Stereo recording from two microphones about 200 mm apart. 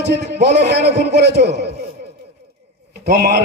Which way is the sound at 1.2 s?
55° right (ahead or behind).